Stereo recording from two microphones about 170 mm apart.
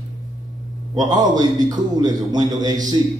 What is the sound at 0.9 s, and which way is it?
A man's voice, 25° right (ahead or behind).